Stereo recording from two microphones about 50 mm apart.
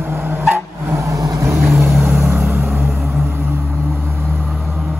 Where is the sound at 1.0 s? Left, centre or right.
Right.